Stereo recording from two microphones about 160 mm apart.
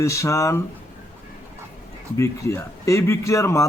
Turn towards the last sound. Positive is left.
turn(degrees=20)  # may be behind; listen again after turning